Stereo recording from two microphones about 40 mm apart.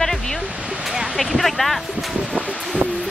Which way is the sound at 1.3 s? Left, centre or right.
Centre.